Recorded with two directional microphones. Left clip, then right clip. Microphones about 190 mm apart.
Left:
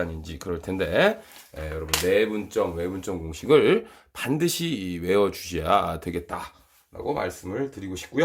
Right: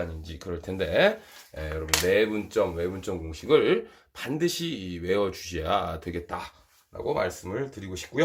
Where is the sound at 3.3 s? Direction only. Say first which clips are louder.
Left 3 dB; 30° left (ahead or behind).